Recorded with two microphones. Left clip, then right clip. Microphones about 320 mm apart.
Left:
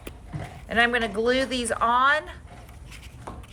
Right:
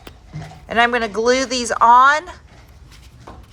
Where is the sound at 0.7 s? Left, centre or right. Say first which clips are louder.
Right 6 dB; centre.